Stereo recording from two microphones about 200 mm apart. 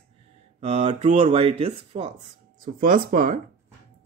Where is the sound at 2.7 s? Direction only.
45° right (ahead or behind).